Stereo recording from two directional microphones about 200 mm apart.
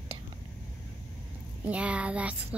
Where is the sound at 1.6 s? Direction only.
5° right (ahead or behind).